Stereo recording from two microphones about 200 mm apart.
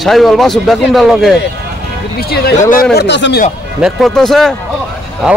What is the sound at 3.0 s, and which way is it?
Speech, 60° left (ahead or behind).